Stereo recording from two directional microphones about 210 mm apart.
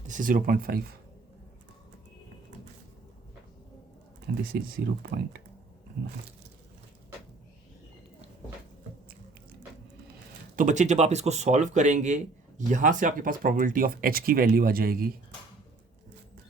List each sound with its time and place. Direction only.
0.1 s speech: 40° right (ahead or behind)
4.3 s speech: 50° right (ahead or behind)
10.5 s speech: 40° right (ahead or behind)